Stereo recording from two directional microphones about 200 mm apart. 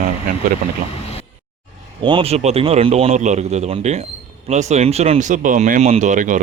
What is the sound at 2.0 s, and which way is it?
A man's voice, 25° right (ahead or behind).